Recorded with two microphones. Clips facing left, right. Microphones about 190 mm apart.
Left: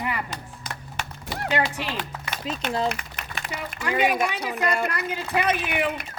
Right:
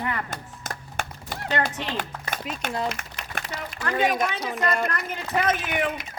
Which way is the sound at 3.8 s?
10° left (ahead or behind).